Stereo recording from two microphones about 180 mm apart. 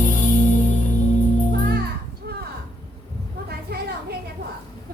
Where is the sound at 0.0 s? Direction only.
45° left (ahead or behind).